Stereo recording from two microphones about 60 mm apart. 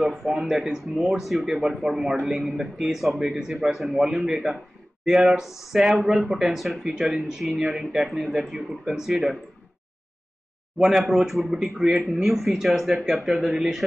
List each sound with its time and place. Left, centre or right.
0.0 s speech: centre
10.8 s speech: centre